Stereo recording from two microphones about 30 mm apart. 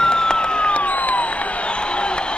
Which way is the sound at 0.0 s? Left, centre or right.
Left.